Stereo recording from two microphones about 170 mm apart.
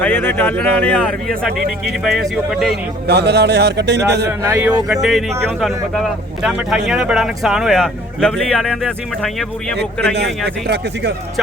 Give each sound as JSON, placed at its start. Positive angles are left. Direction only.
{"t": 0.0, "sound": "speech", "side_deg": 10}
{"t": 3.1, "sound": "speech", "side_deg": -75}
{"t": 4.3, "sound": "a man's voice", "side_deg": -15}
{"t": 4.9, "sound": "speech", "side_deg": 0}
{"t": 10.2, "sound": "speech", "side_deg": -80}